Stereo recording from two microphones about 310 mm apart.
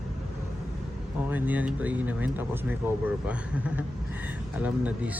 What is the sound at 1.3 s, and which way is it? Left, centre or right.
Speech, centre.